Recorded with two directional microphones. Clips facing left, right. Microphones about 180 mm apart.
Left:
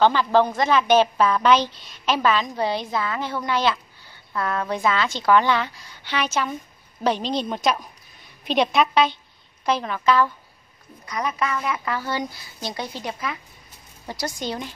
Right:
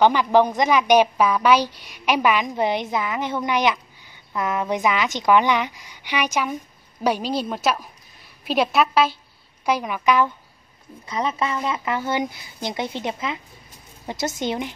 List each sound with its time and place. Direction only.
0.0 s a woman's voice: 15° right (ahead or behind)